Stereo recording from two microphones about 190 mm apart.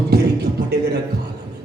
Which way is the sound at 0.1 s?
60° right (ahead or behind).